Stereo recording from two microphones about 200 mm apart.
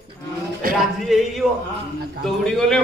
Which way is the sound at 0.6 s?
45° right (ahead or behind).